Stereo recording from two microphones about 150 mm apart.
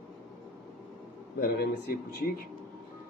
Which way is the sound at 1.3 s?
85° left.